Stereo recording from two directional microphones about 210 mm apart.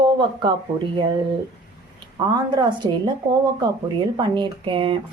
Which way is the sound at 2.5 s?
20° right (ahead or behind).